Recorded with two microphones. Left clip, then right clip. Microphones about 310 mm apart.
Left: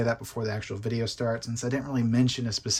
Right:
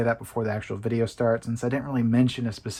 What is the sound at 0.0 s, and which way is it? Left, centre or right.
Speech, centre.